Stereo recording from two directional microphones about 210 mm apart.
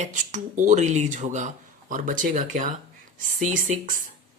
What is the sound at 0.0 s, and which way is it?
Speech, 35° right (ahead or behind).